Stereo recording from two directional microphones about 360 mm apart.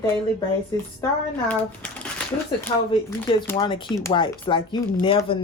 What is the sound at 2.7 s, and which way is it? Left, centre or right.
Speech, centre.